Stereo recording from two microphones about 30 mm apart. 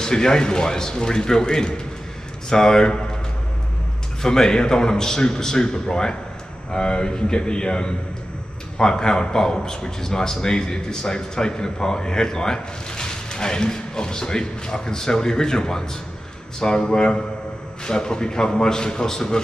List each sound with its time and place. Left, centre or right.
0.0 s a man's voice: left
4.2 s a man's voice: left